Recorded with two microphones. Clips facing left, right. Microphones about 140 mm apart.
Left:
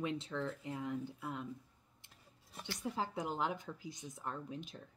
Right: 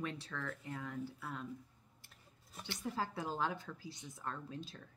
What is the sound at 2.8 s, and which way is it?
Speech, 20° left (ahead or behind).